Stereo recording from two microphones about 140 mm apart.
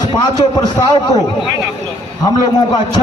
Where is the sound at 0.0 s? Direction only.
30° left (ahead or behind).